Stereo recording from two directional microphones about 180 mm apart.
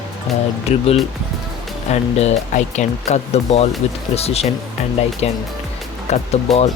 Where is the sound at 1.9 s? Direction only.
40° left (ahead or behind).